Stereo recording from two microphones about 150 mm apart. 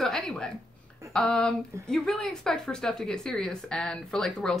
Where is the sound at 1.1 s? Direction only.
5° left (ahead or behind).